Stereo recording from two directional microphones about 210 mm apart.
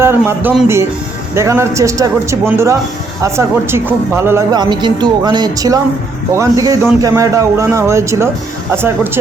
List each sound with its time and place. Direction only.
0.0 s speech: 10° right (ahead or behind)